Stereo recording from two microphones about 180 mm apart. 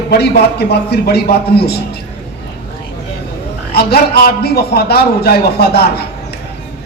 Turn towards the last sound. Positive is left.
turn(degrees=65)  # may be behind; listen again after turning